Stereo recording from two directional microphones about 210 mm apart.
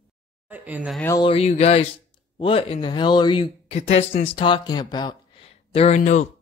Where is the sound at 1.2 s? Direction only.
30° left (ahead or behind).